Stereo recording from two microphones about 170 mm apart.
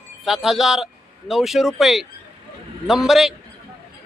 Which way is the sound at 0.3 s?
Centre (ahead or behind).